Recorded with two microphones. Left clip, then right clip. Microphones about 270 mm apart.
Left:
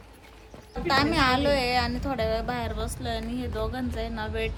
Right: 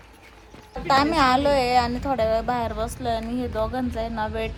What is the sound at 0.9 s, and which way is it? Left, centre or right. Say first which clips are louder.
Speech: right 4 dB; centre.